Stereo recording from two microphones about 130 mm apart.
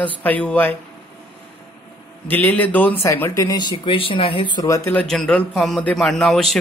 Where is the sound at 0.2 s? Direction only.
10° left (ahead or behind).